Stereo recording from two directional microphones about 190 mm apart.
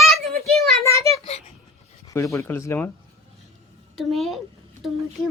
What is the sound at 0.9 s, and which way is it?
Speech, 15° left (ahead or behind).